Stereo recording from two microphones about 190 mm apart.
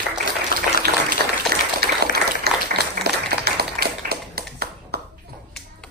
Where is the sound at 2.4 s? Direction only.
55° right (ahead or behind).